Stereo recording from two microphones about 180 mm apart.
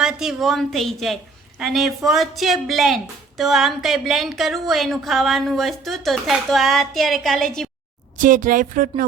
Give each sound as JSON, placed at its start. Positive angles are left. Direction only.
{"t": 0.0, "sound": "a woman's voice", "side_deg": -5}
{"t": 8.2, "sound": "speech", "side_deg": -45}